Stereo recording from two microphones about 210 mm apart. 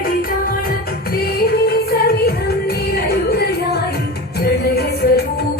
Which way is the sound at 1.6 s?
45° left (ahead or behind).